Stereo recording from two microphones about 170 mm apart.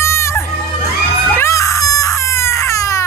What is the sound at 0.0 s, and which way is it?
Crowd, 15° left (ahead or behind).